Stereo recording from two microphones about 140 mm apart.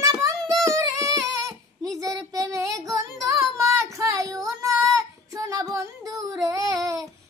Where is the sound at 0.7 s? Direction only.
25° right (ahead or behind).